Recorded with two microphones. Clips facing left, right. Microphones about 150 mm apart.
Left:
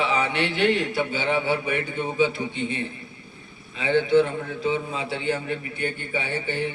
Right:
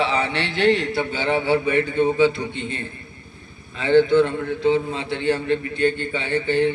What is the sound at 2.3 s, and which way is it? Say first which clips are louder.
Speech: even; 10° left (ahead or behind).